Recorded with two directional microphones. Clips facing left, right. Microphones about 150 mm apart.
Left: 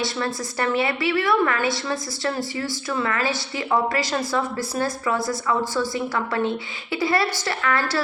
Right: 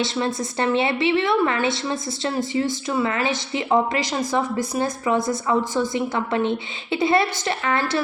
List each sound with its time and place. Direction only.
0.0 s a woman's voice: 20° right (ahead or behind)